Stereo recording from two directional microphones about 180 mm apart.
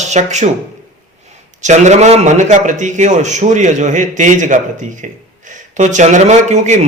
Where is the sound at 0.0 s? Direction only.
40° right (ahead or behind).